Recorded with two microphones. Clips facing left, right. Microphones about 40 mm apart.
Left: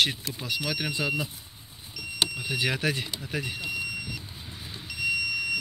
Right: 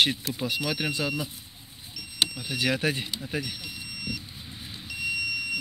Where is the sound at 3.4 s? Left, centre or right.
Left.